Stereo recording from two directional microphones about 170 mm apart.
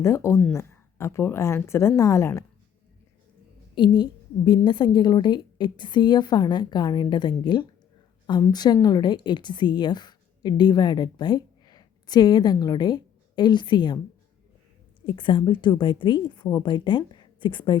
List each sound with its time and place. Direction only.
0.0 s speech: 15° left (ahead or behind)
3.8 s a woman's voice: 25° left (ahead or behind)
15.0 s a woman's voice: 30° left (ahead or behind)